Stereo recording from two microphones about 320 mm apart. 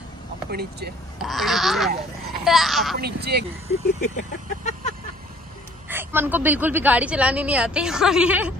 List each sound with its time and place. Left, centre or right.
0.5 s speech: right
1.2 s a woman's voice: centre
3.0 s speech: right
4.0 s vehicle: left
5.9 s a woman's voice: centre